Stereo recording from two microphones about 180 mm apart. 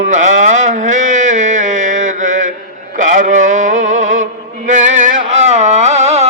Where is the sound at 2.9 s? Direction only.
45° right (ahead or behind).